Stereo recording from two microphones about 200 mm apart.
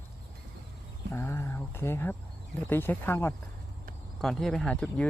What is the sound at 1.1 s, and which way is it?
Speech, 15° left (ahead or behind).